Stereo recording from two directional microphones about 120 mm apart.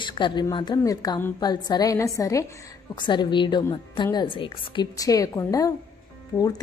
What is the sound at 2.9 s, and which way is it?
A woman's voice, 40° left (ahead or behind).